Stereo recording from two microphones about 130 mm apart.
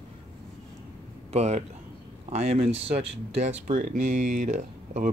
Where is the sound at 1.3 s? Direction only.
60° right (ahead or behind).